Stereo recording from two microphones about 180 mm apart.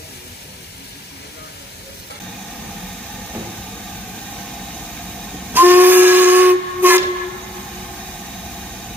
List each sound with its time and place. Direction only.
5.5 s steam whistle: 10° right (ahead or behind)